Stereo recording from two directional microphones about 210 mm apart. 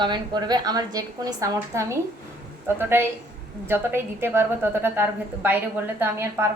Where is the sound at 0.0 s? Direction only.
20° right (ahead or behind).